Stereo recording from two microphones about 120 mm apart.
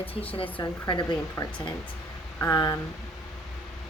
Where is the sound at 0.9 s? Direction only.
40° left (ahead or behind).